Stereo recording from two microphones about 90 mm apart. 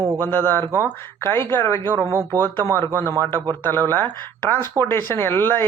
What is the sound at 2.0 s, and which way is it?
Speech, 30° right (ahead or behind).